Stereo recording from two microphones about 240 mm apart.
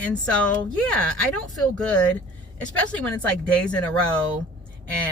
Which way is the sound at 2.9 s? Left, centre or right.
Centre.